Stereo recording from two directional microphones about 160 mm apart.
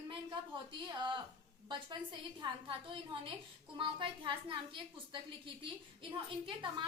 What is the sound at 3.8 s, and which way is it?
A woman's voice, 30° right (ahead or behind).